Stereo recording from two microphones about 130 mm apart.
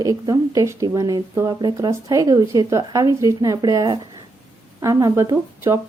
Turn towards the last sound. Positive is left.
turn(degrees=-20)  # may be behind; listen again after turning